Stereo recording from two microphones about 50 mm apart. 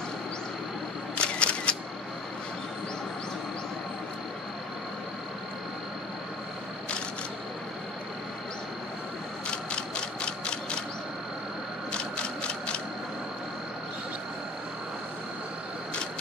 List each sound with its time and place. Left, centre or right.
1.1 s single-lens reflex camera: left
9.5 s ratchet: centre
11.9 s mechanisms: centre